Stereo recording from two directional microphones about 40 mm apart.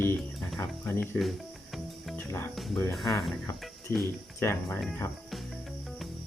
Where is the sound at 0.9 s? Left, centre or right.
Left.